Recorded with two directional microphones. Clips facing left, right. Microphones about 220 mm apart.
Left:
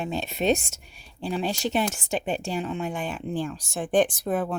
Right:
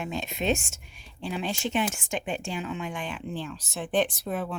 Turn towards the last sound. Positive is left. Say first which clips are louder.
# left 5 dB
turn(degrees=45)  # may be behind; listen again after turning